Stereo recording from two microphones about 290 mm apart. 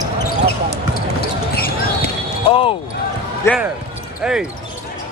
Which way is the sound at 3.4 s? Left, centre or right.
Centre.